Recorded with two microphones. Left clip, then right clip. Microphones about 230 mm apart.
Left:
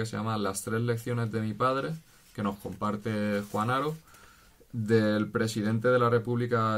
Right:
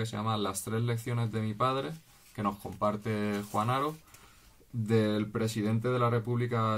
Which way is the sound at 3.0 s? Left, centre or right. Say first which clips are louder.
Left 3 dB; centre.